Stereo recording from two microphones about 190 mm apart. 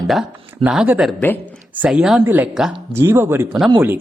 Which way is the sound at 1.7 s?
5° right (ahead or behind).